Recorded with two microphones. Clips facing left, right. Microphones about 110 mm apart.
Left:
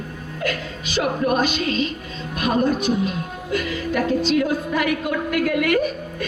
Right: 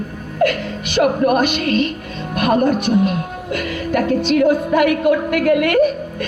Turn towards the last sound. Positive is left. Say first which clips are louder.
# right 6 dB
turn(degrees=-55)  # may be behind; listen again after turning